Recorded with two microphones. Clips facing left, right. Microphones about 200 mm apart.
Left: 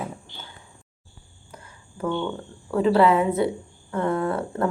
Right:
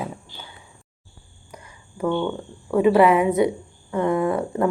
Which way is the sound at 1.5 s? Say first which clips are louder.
Right 2 dB; 15° right (ahead or behind).